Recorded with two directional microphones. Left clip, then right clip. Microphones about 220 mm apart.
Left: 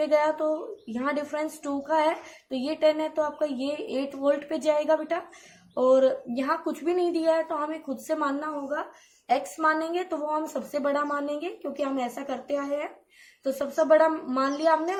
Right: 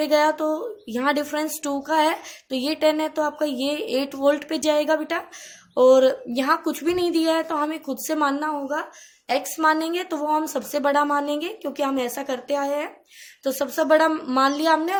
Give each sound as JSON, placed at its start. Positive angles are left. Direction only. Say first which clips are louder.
{"t": 0.0, "sound": "speech", "louder": "right 4 dB", "side_deg": -40}